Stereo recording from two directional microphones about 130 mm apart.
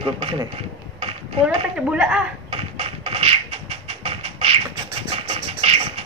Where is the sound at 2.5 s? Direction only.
50° right (ahead or behind).